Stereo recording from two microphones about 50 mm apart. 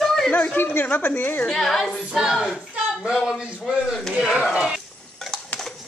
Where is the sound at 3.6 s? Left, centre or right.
Centre.